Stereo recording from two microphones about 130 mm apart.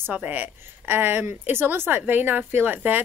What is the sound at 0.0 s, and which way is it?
A woman's voice, 10° right (ahead or behind).